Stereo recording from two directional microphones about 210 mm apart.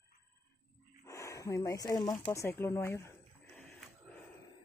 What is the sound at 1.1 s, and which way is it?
Speech, 15° left (ahead or behind).